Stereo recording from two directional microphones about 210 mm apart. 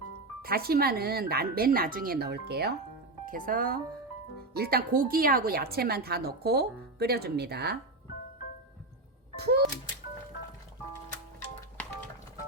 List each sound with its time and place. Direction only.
0.4 s a woman's voice: 45° right (ahead or behind)
9.3 s music: 50° right (ahead or behind)